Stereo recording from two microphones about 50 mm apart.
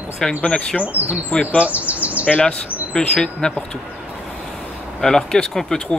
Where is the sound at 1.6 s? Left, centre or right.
Right.